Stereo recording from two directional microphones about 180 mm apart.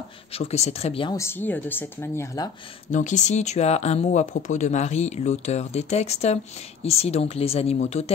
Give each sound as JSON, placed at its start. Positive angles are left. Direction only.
{"t": 0.3, "sound": "speech", "side_deg": 35}
{"t": 1.1, "sound": "speech", "side_deg": 15}
{"t": 2.9, "sound": "speech", "side_deg": 45}